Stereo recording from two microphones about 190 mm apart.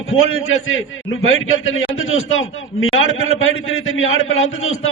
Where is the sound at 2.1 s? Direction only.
90° left.